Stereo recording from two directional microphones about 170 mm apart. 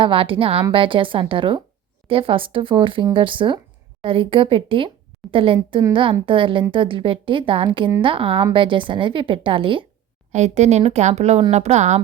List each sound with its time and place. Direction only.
0.0 s a woman's voice: 30° right (ahead or behind)
10.3 s speech: 40° right (ahead or behind)